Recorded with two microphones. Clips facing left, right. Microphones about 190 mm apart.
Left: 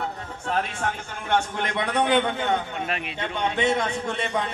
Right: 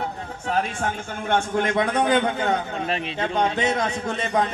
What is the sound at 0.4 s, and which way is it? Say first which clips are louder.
A man's voice: right 2 dB; 40° right (ahead or behind).